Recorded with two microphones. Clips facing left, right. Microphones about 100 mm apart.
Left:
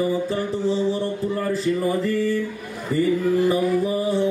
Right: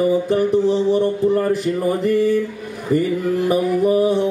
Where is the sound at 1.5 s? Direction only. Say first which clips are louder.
Right 3 dB; 65° right (ahead or behind).